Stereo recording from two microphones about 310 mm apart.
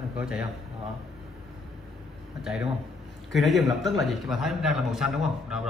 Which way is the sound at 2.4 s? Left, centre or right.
Centre.